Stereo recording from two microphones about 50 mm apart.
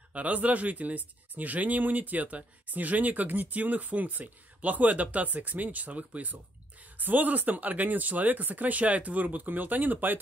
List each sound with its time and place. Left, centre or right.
0.1 s speech: right